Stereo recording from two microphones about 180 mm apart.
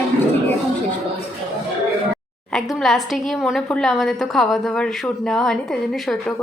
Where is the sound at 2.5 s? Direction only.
Centre (ahead or behind).